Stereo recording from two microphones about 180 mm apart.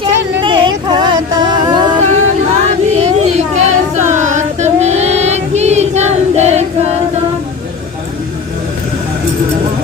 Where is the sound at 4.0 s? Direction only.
40° right (ahead or behind).